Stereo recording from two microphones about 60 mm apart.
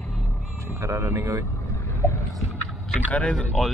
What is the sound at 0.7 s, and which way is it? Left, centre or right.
Speech, right.